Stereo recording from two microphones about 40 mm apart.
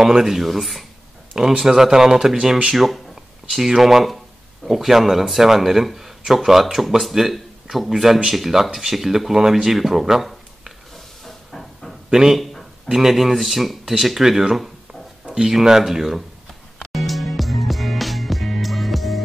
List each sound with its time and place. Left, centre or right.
0.0 s speech: centre
1.3 s speech: centre
11.2 s hiss: centre
12.1 s speech: centre
15.5 s speech: centre
16.9 s music: centre